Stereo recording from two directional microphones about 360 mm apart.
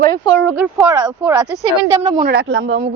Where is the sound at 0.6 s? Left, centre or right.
Centre.